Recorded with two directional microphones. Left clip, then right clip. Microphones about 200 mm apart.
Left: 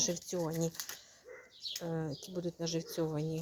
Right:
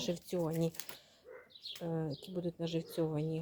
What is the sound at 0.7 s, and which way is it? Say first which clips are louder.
Speech: left 4 dB; 40° right (ahead or behind).